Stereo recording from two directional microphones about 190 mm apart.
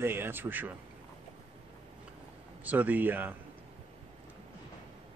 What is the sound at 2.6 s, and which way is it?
Speech, 10° right (ahead or behind).